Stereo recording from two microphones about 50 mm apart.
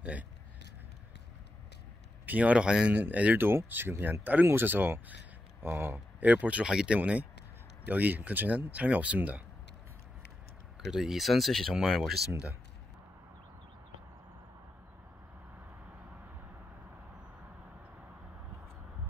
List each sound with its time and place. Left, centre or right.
2.2 s speech: right
2.6 s speech: centre
2.9 s speech: right
3.3 s speech: right
5.9 s speech: right
6.7 s speech: centre
7.9 s speech: right
10.9 s speech: centre